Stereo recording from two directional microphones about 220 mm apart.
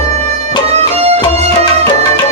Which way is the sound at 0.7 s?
30° right (ahead or behind).